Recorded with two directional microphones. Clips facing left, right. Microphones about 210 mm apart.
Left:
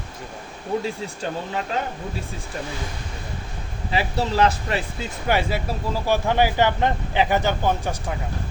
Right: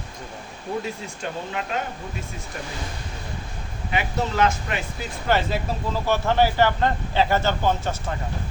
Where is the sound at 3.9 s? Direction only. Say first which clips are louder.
Left 2 dB; 35° left (ahead or behind).